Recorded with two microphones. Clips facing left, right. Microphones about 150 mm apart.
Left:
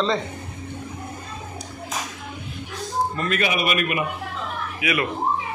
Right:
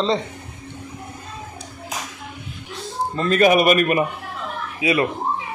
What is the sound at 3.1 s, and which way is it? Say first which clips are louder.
Speech: right 5 dB; 30° right (ahead or behind).